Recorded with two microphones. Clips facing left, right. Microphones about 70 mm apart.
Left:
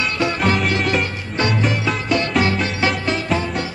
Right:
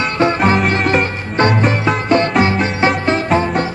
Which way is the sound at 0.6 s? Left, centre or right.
Right.